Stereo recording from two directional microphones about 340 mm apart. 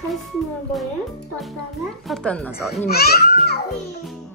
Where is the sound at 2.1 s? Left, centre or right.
Centre.